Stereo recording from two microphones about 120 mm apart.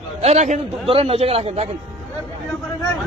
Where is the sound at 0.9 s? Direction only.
55° right (ahead or behind).